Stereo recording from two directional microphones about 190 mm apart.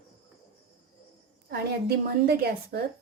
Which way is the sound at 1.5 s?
55° right (ahead or behind).